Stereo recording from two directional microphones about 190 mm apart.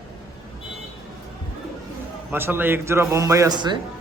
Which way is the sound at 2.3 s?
10° right (ahead or behind).